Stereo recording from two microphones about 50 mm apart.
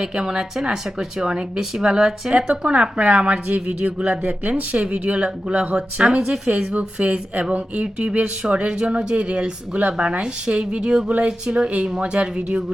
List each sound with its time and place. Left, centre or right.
0.0 s speech: centre
6.7 s speech: right